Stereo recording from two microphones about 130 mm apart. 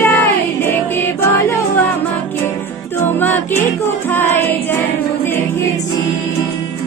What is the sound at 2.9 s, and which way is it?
Music, 15° left (ahead or behind).